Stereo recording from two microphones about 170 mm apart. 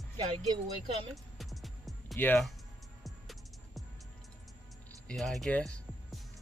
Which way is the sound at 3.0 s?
Centre (ahead or behind).